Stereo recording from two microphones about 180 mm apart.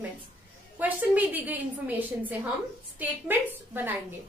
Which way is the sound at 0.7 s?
10° right (ahead or behind).